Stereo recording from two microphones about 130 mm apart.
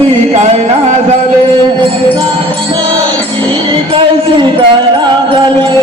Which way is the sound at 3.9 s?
40° right (ahead or behind).